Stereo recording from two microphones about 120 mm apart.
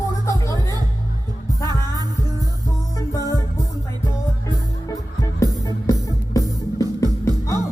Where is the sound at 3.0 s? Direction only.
30° left (ahead or behind).